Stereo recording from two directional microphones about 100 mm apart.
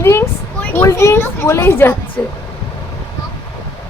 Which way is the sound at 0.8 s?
30° left (ahead or behind).